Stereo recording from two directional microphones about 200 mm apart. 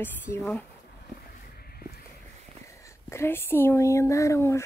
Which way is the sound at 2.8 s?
15° left (ahead or behind).